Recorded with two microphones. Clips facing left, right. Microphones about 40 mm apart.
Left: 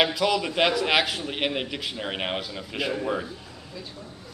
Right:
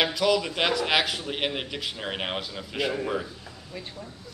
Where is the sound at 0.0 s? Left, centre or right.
Centre.